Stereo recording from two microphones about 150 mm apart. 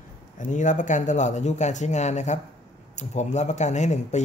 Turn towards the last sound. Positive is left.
turn(degrees=50)  # may be behind; listen again after turning